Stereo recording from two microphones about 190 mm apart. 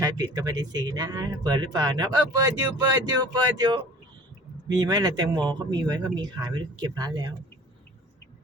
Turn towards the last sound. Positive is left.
turn(degrees=-20)  # may be behind; listen again after turning